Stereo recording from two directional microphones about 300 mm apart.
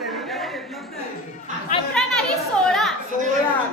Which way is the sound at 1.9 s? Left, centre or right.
Centre.